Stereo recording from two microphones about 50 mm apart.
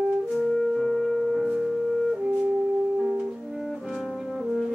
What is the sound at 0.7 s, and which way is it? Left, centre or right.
Music, centre.